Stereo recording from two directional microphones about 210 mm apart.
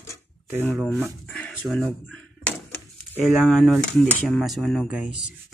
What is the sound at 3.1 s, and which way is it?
Speech, centre (ahead or behind).